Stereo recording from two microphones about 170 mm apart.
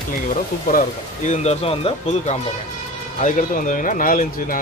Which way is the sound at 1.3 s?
40° left (ahead or behind).